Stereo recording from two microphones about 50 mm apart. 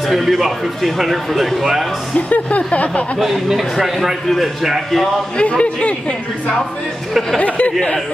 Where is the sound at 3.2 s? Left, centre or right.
Centre.